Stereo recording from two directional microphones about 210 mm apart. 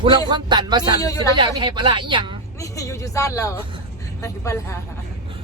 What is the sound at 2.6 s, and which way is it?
Speech, 15° left (ahead or behind).